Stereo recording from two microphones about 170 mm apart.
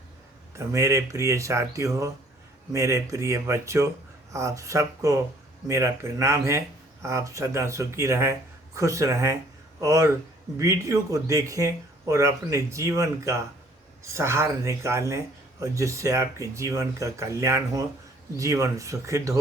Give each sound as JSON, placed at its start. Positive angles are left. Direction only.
{"t": 0.5, "sound": "speech", "side_deg": -15}